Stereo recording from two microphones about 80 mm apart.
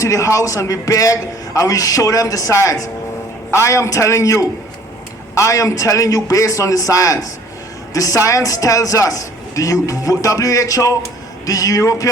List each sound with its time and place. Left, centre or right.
0.0 s a man's voice: left